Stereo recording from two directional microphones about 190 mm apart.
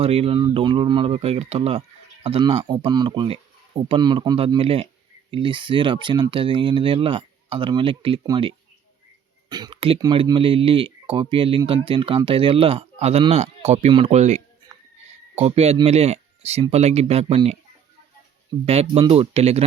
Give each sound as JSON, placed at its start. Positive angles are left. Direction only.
{"t": 0.0, "sound": "speech", "side_deg": -30}
{"t": 18.6, "sound": "speech", "side_deg": -30}